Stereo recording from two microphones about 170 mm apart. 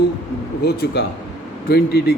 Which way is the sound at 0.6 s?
70° left (ahead or behind).